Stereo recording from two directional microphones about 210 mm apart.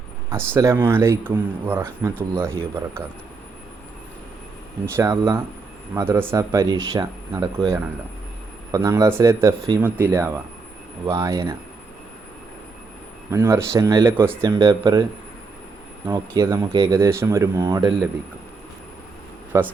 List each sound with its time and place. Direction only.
0.3 s speech: 10° right (ahead or behind)
4.9 s speech: 15° right (ahead or behind)
13.3 s speech: 10° right (ahead or behind)
16.0 s speech: 15° right (ahead or behind)
19.5 s speech: 10° right (ahead or behind)